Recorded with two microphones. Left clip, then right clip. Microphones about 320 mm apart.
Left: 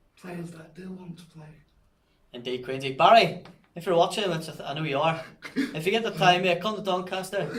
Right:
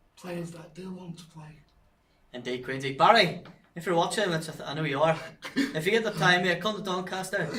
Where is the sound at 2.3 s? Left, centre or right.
Centre.